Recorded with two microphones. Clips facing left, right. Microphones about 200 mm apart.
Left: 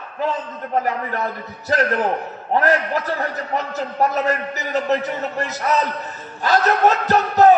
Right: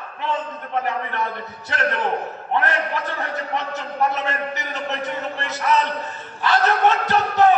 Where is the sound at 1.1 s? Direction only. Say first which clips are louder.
Left 2 dB; 40° left (ahead or behind).